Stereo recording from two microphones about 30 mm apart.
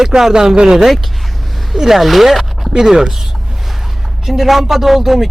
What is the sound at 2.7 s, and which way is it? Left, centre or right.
Speech, centre.